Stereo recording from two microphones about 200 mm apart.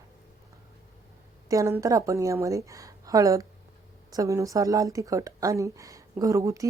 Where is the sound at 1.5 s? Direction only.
15° right (ahead or behind).